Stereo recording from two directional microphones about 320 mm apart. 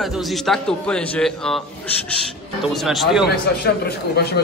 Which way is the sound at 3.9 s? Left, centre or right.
Left.